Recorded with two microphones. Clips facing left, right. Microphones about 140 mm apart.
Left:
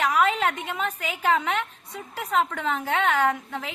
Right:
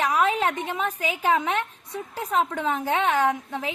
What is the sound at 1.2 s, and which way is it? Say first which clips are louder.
A woman's voice: even; 15° right (ahead or behind).